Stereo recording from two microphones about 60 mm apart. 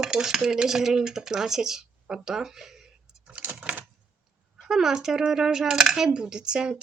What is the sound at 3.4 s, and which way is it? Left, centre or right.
Typewriter, right.